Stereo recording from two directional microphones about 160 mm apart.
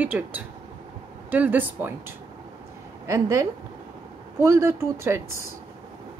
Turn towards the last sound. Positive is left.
turn(degrees=-15)  # may be behind; listen again after turning